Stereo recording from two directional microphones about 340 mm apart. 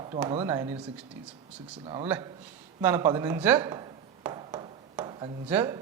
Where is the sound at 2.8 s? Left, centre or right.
Centre.